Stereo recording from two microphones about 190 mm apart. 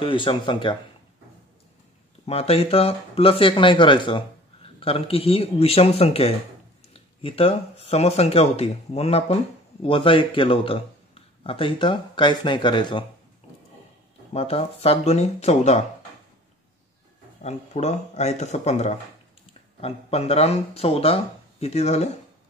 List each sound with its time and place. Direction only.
0.0 s speech: 25° left (ahead or behind)
2.2 s speech: 30° left (ahead or behind)
14.3 s speech: 30° left (ahead or behind)
17.4 s speech: 35° left (ahead or behind)